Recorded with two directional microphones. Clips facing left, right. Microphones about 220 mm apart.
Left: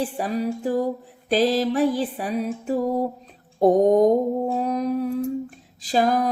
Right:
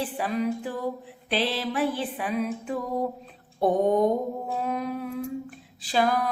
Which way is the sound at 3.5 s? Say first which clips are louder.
Left 6 dB; 40° left (ahead or behind).